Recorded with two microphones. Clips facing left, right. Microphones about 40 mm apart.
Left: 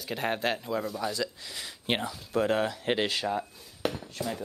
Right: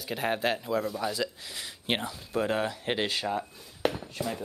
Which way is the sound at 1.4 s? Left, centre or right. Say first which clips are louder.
Even; right.